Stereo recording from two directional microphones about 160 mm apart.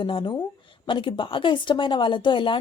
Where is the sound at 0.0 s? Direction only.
30° left (ahead or behind).